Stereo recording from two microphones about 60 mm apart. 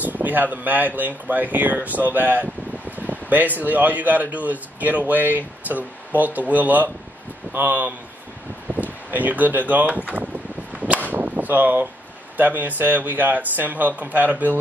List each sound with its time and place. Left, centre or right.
0.0 s speech: right
10.7 s arrow: right
11.1 s a sound: right
12.4 s speech: right